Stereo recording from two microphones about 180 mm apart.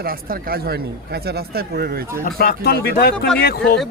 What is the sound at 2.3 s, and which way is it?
Speech, 55° left (ahead or behind).